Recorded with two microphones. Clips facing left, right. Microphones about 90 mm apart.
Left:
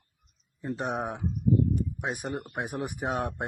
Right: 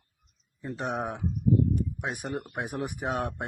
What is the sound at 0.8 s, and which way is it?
Speech, 5° left (ahead or behind).